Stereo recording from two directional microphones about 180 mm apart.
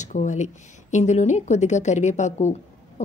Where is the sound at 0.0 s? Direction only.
45° left (ahead or behind).